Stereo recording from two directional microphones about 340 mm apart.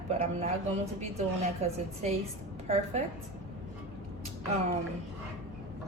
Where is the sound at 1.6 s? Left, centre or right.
Centre.